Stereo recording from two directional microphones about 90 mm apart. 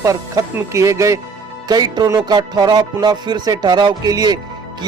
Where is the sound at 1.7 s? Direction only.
45° right (ahead or behind).